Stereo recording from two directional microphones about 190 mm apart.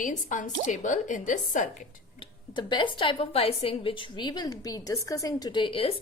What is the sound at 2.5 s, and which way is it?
A woman's voice, 25° left (ahead or behind).